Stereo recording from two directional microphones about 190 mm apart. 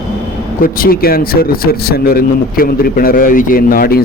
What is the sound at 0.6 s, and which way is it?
Speech, 50° left (ahead or behind).